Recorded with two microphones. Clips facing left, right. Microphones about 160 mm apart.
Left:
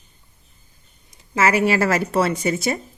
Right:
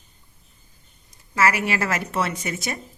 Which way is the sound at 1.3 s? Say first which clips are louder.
Left 4 dB; 25° left (ahead or behind).